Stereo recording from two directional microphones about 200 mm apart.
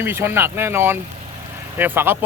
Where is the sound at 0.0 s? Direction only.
10° right (ahead or behind).